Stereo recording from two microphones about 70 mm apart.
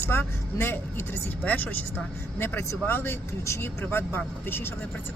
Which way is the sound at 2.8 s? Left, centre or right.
Left.